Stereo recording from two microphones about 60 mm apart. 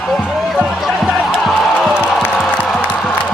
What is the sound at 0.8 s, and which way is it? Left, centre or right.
Music, centre.